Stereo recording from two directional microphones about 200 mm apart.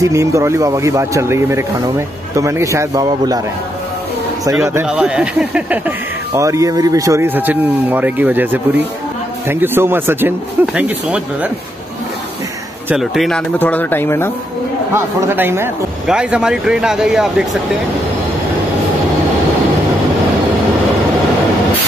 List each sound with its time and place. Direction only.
0.0 s speech: 15° right (ahead or behind)
4.5 s speech: 15° right (ahead or behind)
12.9 s speech: centre (ahead or behind)
15.0 s speech: 15° right (ahead or behind)